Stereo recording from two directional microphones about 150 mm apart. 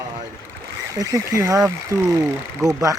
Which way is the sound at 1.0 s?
20° right (ahead or behind).